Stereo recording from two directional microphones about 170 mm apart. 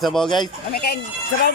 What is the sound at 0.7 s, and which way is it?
Speech, 65° left (ahead or behind).